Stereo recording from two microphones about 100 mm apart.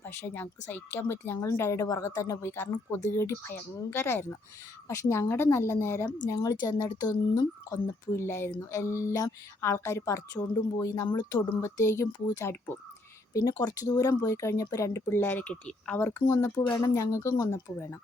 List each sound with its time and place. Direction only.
0.0 s speech: 20° left (ahead or behind)
6.2 s speech: 40° left (ahead or behind)
7.7 s speech: 25° left (ahead or behind); by 11.4 s 45° left (ahead or behind)
11.6 s speech: 30° left (ahead or behind)
13.3 s speech: 40° left (ahead or behind)
15.1 s speech: 20° left (ahead or behind)